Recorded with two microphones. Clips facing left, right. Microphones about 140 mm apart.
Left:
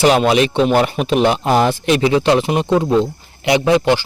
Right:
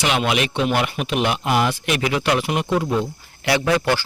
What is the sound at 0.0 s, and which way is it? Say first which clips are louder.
Speech: left 8 dB; 35° left (ahead or behind).